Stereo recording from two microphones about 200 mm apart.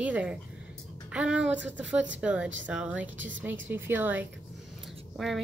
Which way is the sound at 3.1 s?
70° right (ahead or behind).